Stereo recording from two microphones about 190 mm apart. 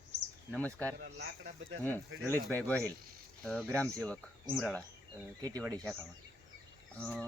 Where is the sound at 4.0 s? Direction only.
5° left (ahead or behind).